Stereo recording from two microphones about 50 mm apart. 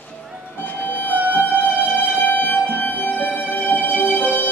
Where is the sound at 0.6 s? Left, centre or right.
Left.